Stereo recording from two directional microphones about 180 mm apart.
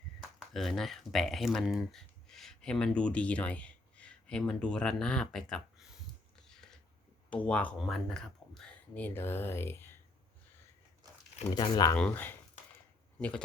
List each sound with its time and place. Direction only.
0.5 s speech: centre (ahead or behind)
6.5 s a sound: 5° left (ahead or behind)
7.3 s speech: 5° left (ahead or behind)
11.5 s speech: 25° left (ahead or behind)
11.9 s speech: 10° left (ahead or behind)